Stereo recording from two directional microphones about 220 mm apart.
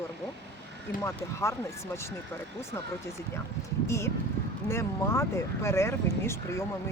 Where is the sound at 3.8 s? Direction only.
10° left (ahead or behind).